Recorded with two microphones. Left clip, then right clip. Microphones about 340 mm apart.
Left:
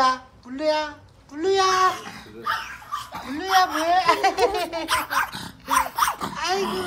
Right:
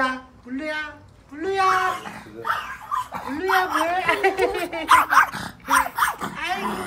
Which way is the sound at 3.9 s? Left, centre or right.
Centre.